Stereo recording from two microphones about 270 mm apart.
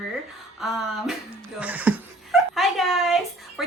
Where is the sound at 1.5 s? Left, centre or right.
Centre.